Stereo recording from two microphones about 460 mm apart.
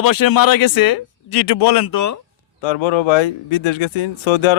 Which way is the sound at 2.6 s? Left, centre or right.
Left.